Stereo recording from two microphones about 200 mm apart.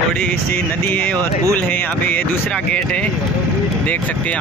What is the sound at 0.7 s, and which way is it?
Speech, 10° left (ahead or behind).